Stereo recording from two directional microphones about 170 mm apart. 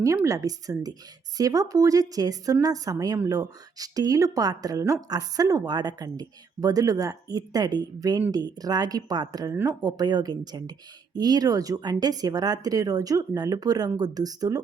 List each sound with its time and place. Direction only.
0.0 s a woman's voice: 20° right (ahead or behind)